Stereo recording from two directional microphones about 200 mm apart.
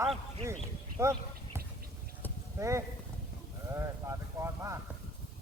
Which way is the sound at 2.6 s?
15° right (ahead or behind).